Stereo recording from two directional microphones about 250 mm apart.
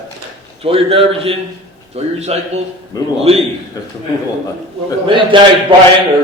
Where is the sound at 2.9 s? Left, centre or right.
Centre.